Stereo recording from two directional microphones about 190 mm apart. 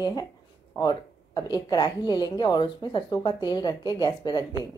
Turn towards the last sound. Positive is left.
turn(degrees=20)  # may be behind; listen again after turning